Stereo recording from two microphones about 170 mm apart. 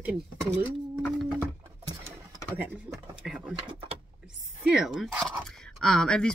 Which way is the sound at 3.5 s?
30° right (ahead or behind).